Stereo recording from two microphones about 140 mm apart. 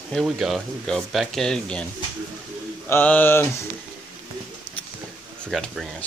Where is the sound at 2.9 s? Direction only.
10° left (ahead or behind).